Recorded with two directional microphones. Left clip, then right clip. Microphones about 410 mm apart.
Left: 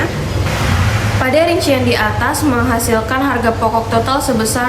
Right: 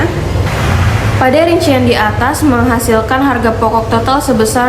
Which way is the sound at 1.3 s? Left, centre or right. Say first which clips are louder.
Right 1 dB; centre.